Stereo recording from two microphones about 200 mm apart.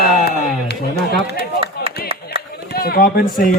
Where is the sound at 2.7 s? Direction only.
50° left (ahead or behind).